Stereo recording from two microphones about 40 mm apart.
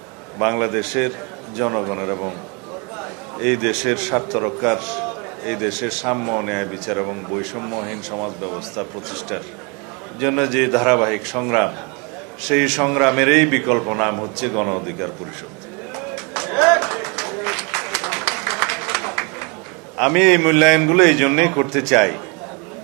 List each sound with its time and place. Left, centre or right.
0.3 s a man's voice: centre
16.0 s music: centre
20.0 s a man's voice: centre